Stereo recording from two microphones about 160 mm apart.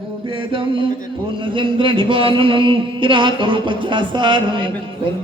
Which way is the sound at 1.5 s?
30° right (ahead or behind).